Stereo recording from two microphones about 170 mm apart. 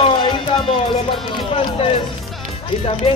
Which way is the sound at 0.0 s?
30° left (ahead or behind).